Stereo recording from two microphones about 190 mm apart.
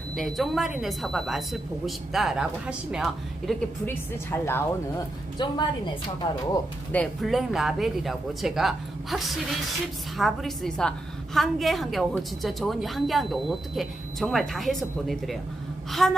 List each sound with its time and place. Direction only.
0.2 s a woman's voice: centre (ahead or behind)
3.8 s a woman's voice: 10° left (ahead or behind)
5.4 s a woman's voice: 25° left (ahead or behind)
6.9 s a woman's voice: 5° left (ahead or behind)